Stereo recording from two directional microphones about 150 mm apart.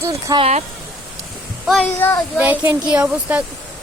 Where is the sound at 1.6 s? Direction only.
5° left (ahead or behind).